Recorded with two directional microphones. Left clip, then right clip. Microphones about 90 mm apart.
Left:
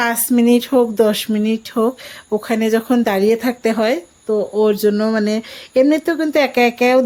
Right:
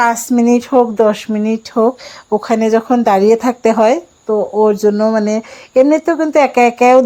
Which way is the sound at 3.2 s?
10° right (ahead or behind).